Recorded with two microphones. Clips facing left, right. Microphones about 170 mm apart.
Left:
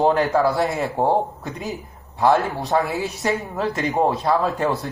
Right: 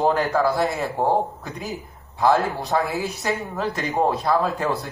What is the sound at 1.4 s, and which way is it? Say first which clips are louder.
Speech: left 2 dB; 20° left (ahead or behind).